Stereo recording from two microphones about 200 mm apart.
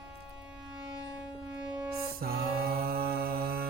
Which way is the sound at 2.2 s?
50° right (ahead or behind).